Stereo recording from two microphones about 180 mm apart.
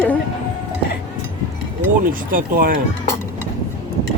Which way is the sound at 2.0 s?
50° right (ahead or behind).